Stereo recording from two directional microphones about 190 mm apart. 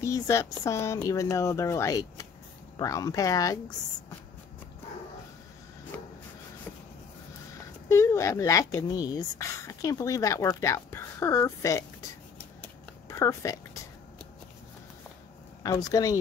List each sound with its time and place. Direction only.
0.0 s speech: 15° left (ahead or behind)
7.9 s speech: 15° left (ahead or behind)
13.1 s speech: 15° left (ahead or behind)
15.6 s speech: 20° left (ahead or behind)